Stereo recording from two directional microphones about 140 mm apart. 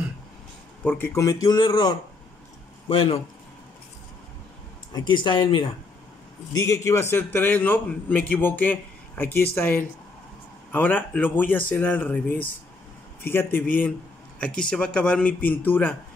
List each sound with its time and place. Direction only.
0.8 s speech: 15° left (ahead or behind); by 3.2 s 40° left (ahead or behind)
4.9 s speech: 35° left (ahead or behind)
6.5 s a man's voice: 25° left (ahead or behind)